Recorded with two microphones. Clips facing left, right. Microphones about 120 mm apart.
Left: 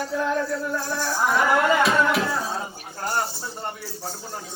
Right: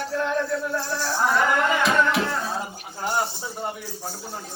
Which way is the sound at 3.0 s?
5° right (ahead or behind).